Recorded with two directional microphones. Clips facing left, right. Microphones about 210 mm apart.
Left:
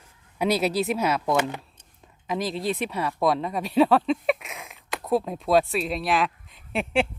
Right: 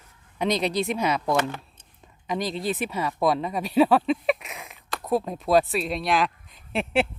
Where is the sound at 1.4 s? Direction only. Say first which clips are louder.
Even; 15° left (ahead or behind).